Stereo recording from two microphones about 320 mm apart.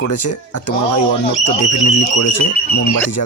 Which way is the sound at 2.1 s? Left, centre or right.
Left.